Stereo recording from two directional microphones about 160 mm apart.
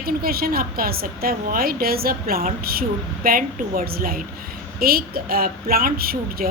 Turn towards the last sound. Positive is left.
turn(degrees=-70)  # may be behind; listen again after turning